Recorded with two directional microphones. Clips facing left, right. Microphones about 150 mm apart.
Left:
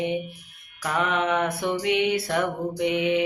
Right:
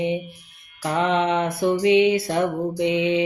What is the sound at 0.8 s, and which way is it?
Mantra, 25° right (ahead or behind).